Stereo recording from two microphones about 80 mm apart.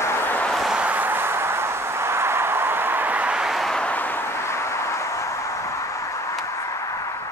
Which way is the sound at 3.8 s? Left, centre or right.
Left.